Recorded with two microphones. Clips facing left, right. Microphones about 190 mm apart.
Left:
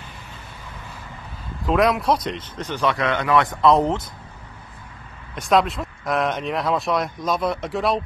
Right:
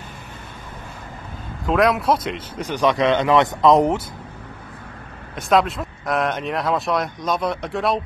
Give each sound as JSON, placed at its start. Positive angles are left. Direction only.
{"t": 1.7, "sound": "speech", "side_deg": 0}
{"t": 5.3, "sound": "speech", "side_deg": 0}